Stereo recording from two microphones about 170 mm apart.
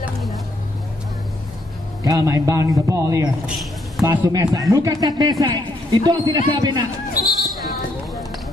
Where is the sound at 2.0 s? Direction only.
20° right (ahead or behind).